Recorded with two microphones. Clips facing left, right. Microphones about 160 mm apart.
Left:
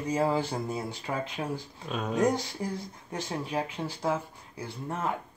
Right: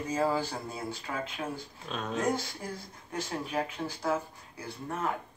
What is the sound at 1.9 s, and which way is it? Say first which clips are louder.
Speech: left 4 dB; 10° left (ahead or behind).